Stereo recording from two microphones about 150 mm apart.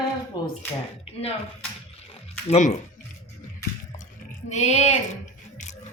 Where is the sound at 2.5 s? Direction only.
50° left (ahead or behind).